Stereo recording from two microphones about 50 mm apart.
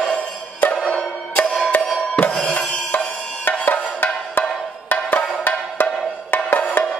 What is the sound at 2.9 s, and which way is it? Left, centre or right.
Music, left.